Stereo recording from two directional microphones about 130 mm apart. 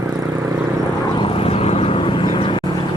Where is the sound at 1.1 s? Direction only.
45° left (ahead or behind).